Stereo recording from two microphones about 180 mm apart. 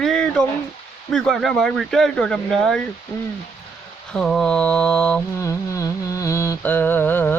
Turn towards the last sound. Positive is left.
turn(degrees=10)  # may be behind; listen again after turning